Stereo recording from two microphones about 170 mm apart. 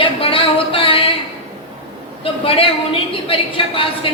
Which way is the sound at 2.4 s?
30° left (ahead or behind).